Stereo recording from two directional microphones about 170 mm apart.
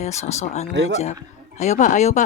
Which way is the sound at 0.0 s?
40° left (ahead or behind).